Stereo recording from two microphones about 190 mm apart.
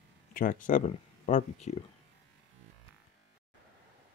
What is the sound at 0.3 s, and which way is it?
Speech, 45° left (ahead or behind).